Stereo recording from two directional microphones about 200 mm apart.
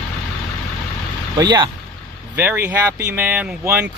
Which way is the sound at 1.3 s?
20° right (ahead or behind).